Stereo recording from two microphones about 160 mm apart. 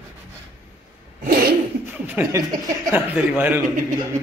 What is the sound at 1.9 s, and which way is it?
Chuckle, 15° right (ahead or behind).